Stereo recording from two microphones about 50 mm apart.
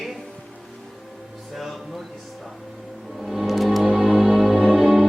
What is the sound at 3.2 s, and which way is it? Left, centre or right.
Music, centre.